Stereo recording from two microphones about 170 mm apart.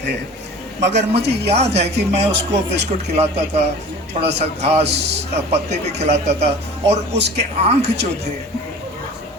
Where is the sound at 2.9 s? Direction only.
40° right (ahead or behind).